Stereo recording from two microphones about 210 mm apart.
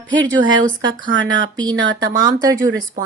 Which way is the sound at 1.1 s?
65° right (ahead or behind).